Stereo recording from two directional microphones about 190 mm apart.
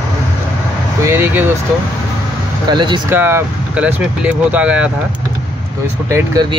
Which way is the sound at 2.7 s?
25° right (ahead or behind).